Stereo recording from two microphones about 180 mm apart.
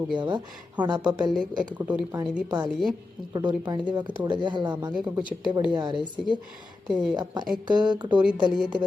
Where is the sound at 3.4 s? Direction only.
20° right (ahead or behind).